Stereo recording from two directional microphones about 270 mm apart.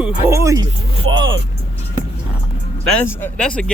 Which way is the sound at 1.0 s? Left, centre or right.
Right.